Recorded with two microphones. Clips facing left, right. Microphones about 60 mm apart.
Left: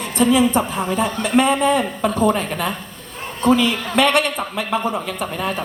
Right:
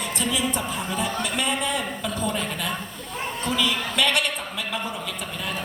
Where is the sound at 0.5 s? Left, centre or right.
Left.